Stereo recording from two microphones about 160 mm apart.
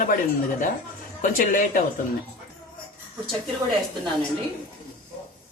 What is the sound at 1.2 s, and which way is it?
Speech, 60° left (ahead or behind).